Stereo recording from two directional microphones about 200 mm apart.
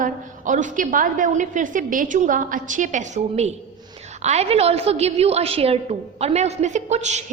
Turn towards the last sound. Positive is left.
turn(degrees=-35)  # may be behind; listen again after turning